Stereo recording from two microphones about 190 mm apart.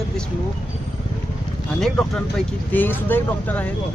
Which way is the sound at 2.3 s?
10° left (ahead or behind).